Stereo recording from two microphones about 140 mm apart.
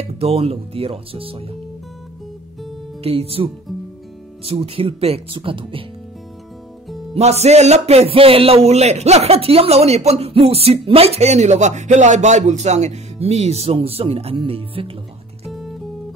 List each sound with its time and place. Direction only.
0.0 s speech: 45° right (ahead or behind)
3.0 s speech: 45° right (ahead or behind)
4.5 s speech: 40° right (ahead or behind)
7.2 s speech: 50° right (ahead or behind)
15.5 s music: centre (ahead or behind)